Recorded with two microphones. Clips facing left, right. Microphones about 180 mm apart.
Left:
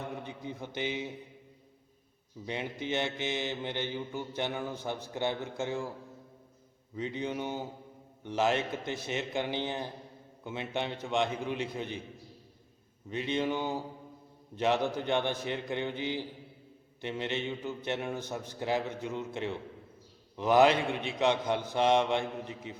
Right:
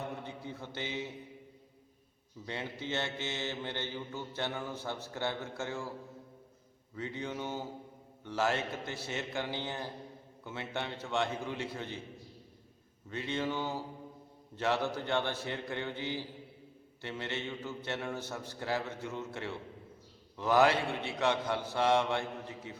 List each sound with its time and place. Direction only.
0.2 s a man's voice: 15° left (ahead or behind)
2.5 s mantra: 15° left (ahead or behind)
6.9 s mantra: 20° left (ahead or behind)
8.2 s a man's voice: 20° left (ahead or behind)
10.4 s mantra: 20° left (ahead or behind)
13.1 s mantra: 20° left (ahead or behind)
20.3 s a man's voice: 20° left (ahead or behind)